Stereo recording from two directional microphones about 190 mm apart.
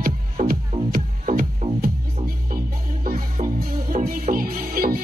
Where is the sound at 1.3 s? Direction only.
35° right (ahead or behind).